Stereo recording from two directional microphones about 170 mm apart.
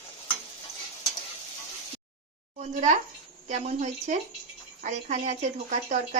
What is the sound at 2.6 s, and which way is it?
Speech, 45° right (ahead or behind).